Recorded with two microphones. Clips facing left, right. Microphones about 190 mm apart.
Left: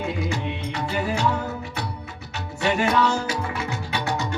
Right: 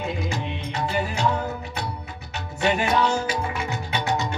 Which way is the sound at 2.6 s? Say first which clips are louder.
Left 1 dB; 20° right (ahead or behind).